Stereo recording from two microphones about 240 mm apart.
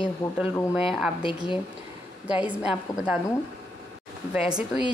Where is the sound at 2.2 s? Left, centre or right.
Centre.